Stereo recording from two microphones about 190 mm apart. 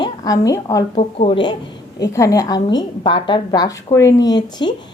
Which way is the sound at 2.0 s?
15° left (ahead or behind).